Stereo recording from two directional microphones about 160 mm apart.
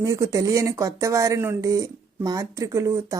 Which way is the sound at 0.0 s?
20° right (ahead or behind).